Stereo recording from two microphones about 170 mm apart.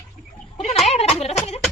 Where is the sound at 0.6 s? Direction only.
35° left (ahead or behind).